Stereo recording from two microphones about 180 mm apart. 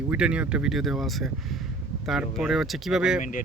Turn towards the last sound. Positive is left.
turn(degrees=45)  # may be behind; listen again after turning